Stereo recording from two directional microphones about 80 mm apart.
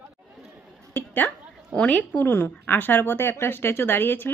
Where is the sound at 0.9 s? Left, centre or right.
Left.